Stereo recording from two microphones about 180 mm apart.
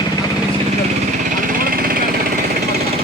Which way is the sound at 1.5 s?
55° right (ahead or behind).